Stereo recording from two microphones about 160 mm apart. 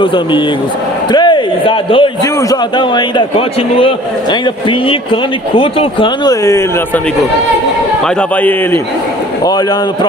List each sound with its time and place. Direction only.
0.0 s a man's voice: 30° left (ahead or behind)